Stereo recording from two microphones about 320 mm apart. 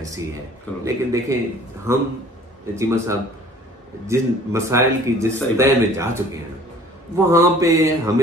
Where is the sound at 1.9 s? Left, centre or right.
Centre.